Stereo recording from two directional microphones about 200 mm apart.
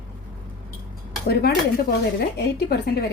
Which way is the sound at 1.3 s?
50° left (ahead or behind).